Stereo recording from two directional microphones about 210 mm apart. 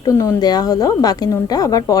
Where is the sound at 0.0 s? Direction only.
15° left (ahead or behind).